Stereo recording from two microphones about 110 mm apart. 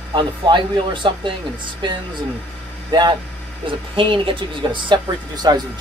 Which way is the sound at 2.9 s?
45° right (ahead or behind).